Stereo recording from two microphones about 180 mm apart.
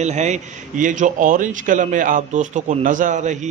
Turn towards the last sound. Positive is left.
turn(degrees=-40)  # may be behind; listen again after turning